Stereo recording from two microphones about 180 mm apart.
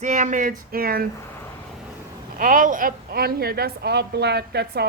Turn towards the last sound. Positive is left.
turn(degrees=-65)  # may be behind; listen again after turning